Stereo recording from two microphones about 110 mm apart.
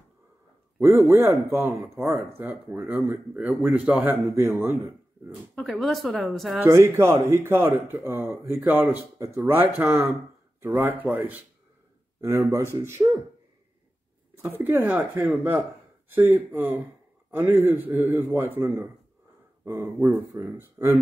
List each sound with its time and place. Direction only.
0.7 s speech: 25° right (ahead or behind)
4.3 s speech: 25° right (ahead or behind)
5.3 s speech: centre (ahead or behind)
6.6 s speech: 25° right (ahead or behind)
12.2 s speech: 25° right (ahead or behind)
14.3 s speech: 20° right (ahead or behind)